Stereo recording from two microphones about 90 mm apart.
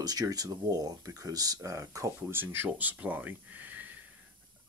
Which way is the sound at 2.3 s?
25° right (ahead or behind).